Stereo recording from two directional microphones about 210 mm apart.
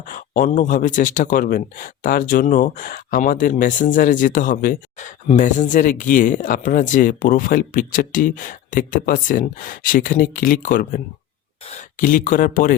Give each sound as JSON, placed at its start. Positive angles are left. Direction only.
{"t": 0.1, "sound": "speech", "side_deg": 40}